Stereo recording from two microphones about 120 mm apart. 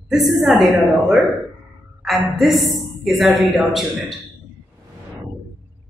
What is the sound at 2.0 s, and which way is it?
A woman's voice, centre (ahead or behind).